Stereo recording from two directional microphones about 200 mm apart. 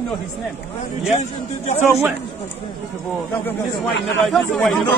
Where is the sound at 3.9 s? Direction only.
60° left (ahead or behind).